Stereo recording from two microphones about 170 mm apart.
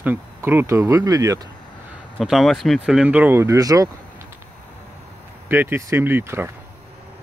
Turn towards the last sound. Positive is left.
turn(degrees=-15)  # may be behind; listen again after turning